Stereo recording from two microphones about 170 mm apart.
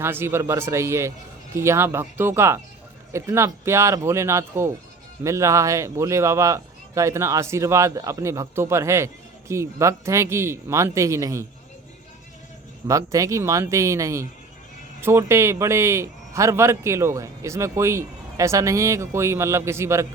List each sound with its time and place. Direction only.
0.0 s a man's voice: 15° right (ahead or behind)
12.9 s a man's voice: 20° right (ahead or behind)